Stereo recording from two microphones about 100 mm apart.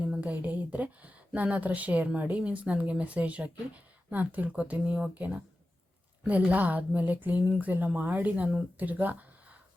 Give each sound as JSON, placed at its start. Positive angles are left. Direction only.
{"t": 0.0, "sound": "speech", "side_deg": -15}